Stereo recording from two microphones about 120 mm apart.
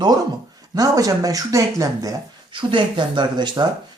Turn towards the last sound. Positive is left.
turn(degrees=-35)  # may be behind; listen again after turning